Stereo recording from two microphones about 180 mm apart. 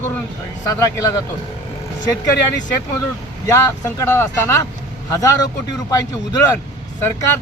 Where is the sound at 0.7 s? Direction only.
20° left (ahead or behind).